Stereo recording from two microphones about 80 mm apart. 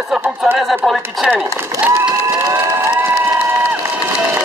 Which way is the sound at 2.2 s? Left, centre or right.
Right.